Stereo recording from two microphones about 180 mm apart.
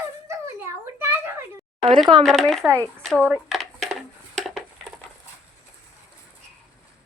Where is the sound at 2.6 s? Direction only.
15° right (ahead or behind).